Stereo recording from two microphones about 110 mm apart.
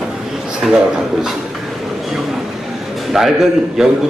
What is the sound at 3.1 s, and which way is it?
Speech, 5° right (ahead or behind).